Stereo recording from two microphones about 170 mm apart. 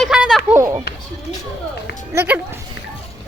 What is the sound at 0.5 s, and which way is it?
Speech, 20° right (ahead or behind).